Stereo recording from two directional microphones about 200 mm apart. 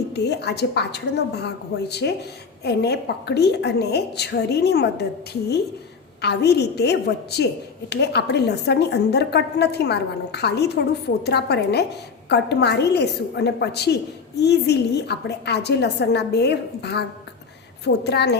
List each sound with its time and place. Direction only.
0.1 s a woman's voice: 55° left (ahead or behind)